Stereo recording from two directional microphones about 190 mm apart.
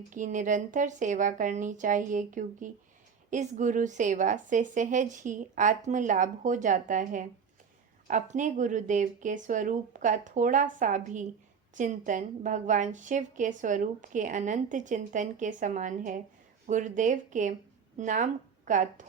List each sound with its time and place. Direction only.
0.1 s a woman's voice: 40° right (ahead or behind)